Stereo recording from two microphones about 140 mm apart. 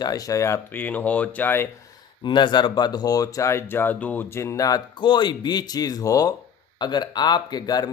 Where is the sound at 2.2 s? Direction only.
35° left (ahead or behind).